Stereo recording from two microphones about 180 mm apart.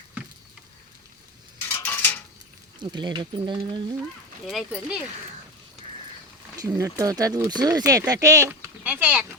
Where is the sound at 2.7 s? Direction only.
25° right (ahead or behind).